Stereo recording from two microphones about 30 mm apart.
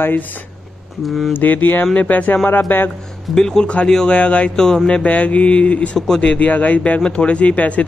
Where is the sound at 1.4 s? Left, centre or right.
Left.